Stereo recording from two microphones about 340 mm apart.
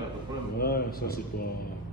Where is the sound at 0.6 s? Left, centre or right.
Left.